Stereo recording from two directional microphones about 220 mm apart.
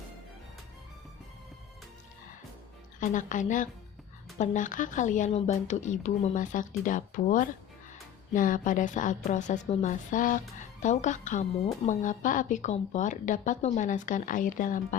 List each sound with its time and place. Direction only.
3.0 s a woman's voice: 35° left (ahead or behind)